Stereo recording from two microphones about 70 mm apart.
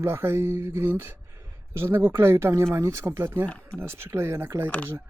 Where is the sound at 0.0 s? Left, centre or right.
Right.